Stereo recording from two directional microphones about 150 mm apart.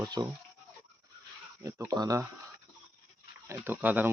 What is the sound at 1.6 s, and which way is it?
Speech, 20° right (ahead or behind).